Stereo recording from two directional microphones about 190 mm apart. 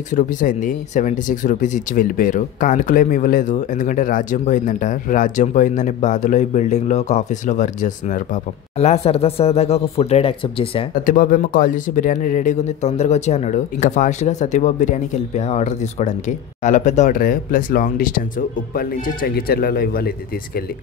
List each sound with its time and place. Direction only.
0.1 s a man's voice: 45° left (ahead or behind)
11.1 s a man's voice: 45° left (ahead or behind)